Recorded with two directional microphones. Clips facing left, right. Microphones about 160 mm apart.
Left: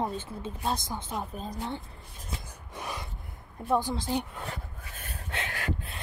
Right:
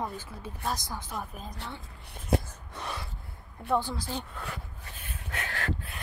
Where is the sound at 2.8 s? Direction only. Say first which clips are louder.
Even; 10° left (ahead or behind).